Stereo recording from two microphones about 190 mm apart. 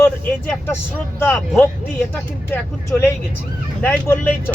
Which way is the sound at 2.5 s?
15° left (ahead or behind).